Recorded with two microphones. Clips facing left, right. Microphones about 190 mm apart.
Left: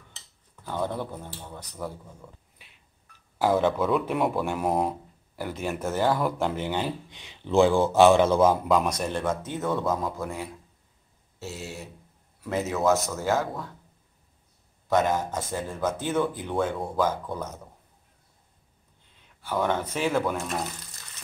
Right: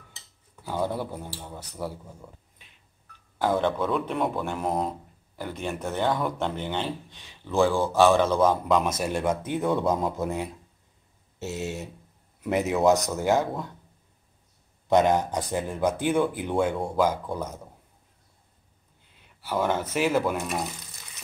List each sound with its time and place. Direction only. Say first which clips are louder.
0.6 s speech: right 1 dB; 5° right (ahead or behind)
3.3 s speech: left 2 dB; 5° left (ahead or behind); by 10.5 s 20° right (ahead or behind)
11.3 s a sound: right 5 dB; 20° right (ahead or behind)
12.4 s speech: right 3 dB; 20° right (ahead or behind)
14.9 s speech: right 3 dB; 20° right (ahead or behind)
16.7 s speech: right 2 dB; centre (ahead or behind)
17.0 s speech: right 2 dB; 10° right (ahead or behind)
19.4 s speech: even; 5° right (ahead or behind)